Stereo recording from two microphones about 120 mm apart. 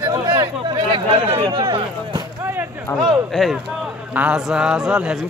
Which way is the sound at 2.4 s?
20° right (ahead or behind).